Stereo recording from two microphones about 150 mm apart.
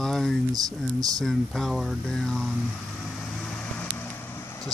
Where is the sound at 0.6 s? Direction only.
25° right (ahead or behind).